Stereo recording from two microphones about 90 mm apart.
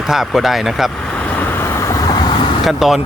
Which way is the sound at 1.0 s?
15° left (ahead or behind).